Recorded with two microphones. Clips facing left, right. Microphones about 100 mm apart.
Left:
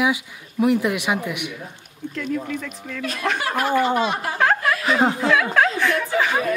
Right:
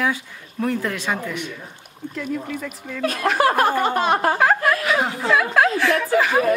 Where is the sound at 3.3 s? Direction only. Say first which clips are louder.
Right 3 dB; 45° right (ahead or behind).